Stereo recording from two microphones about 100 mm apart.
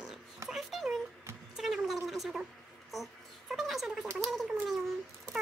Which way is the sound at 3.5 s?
Centre (ahead or behind).